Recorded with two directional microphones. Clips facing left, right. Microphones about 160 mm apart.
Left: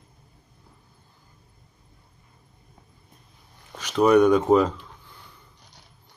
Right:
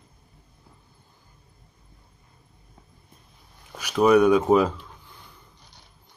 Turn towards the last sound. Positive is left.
turn(degrees=-10)  # may be behind; listen again after turning